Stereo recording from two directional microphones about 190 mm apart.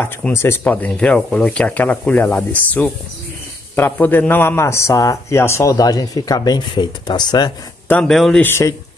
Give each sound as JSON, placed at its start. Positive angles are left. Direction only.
{"t": 0.0, "sound": "a man's voice", "side_deg": 10}
{"t": 7.9, "sound": "a man's voice", "side_deg": 5}